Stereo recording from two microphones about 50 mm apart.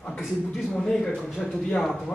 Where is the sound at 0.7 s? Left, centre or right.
Centre.